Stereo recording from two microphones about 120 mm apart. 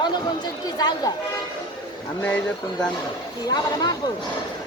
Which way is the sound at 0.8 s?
35° left (ahead or behind).